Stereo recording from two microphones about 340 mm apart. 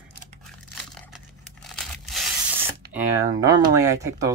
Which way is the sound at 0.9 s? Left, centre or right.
Centre.